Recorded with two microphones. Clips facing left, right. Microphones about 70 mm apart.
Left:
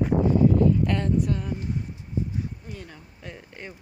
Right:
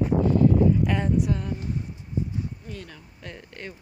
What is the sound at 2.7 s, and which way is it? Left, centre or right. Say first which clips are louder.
Speech: right 1 dB; centre.